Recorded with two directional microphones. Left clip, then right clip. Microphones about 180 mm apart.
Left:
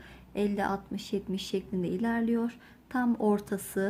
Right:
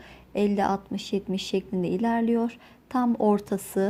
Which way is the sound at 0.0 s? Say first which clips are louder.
Right 6 dB; 30° right (ahead or behind).